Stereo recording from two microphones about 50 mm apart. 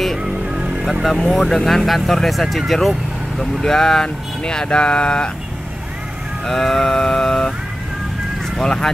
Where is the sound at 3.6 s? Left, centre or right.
Centre.